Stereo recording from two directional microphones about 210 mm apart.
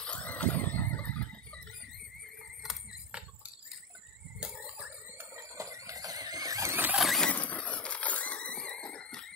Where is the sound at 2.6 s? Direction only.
Centre (ahead or behind).